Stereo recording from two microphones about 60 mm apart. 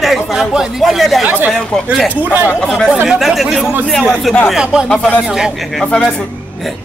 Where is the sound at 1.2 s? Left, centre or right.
Right.